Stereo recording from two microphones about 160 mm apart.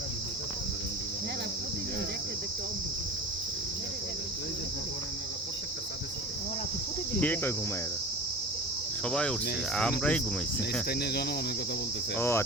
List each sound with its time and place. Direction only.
7.2 s speech: 10° left (ahead or behind)
9.0 s speech: 5° left (ahead or behind)
10.8 s cricket: 80° left
12.1 s speech: 15° left (ahead or behind)